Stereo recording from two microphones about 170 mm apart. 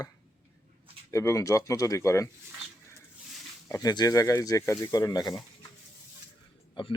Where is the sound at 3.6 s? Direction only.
20° left (ahead or behind).